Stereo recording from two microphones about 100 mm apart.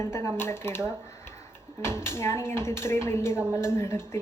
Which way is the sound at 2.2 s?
25° left (ahead or behind).